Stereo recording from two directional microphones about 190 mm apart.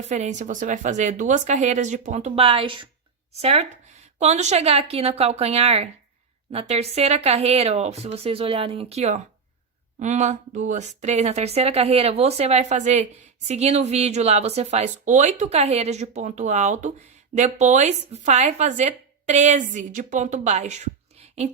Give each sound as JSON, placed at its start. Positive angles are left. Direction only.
{"t": 0.0, "sound": "a woman's voice", "side_deg": -35}